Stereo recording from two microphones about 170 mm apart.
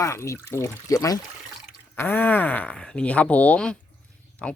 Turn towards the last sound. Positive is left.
turn(degrees=5)  # may be behind; listen again after turning